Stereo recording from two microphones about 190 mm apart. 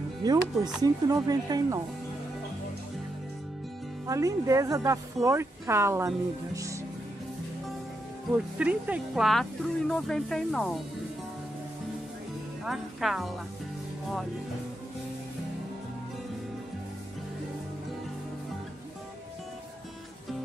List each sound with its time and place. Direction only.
0.2 s speech: 20° right (ahead or behind)
4.1 s speech: 15° right (ahead or behind)
8.5 s speech: 10° right (ahead or behind)
12.6 s speech: centre (ahead or behind)